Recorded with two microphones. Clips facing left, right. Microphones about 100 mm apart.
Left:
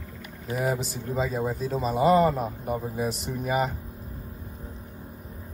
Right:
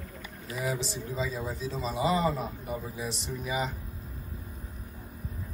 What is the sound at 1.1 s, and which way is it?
Speech, 55° left (ahead or behind).